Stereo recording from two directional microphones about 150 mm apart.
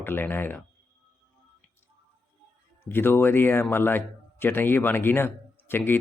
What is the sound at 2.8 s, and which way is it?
Speech, 15° left (ahead or behind).